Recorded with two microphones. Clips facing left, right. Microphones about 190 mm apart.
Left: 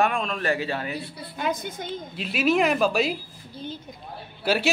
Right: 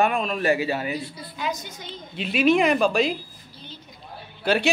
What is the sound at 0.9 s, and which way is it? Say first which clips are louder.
A woman's voice: right 1 dB; 55° left (ahead or behind).